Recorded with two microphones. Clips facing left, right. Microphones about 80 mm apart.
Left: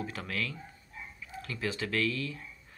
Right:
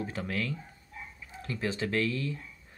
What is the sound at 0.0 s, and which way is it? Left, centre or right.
Speech, right.